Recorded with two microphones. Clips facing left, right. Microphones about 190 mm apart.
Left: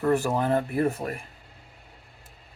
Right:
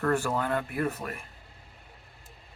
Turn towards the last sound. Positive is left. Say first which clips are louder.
# left 5 dB
turn(degrees=30)  # may be behind; listen again after turning